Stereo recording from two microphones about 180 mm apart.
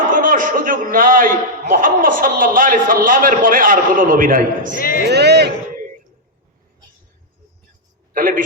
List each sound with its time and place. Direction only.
0.1 s a sound: 50° right (ahead or behind)
1.7 s a man's voice: 50° right (ahead or behind)
4.7 s speech: 55° left (ahead or behind)
5.0 s a man's voice: 65° right (ahead or behind)
8.1 s a man's voice: 50° right (ahead or behind)